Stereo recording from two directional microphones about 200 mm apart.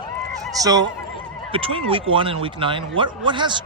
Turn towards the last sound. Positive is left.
turn(degrees=-25)  # may be behind; listen again after turning